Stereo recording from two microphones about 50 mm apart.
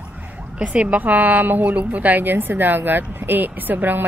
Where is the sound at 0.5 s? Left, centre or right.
Right.